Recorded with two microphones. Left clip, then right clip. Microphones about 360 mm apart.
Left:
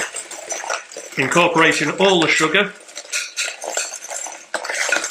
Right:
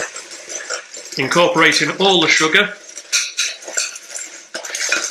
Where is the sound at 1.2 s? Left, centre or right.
Centre.